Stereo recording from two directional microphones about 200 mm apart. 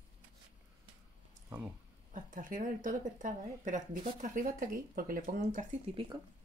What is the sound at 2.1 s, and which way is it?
Speech, 40° right (ahead or behind).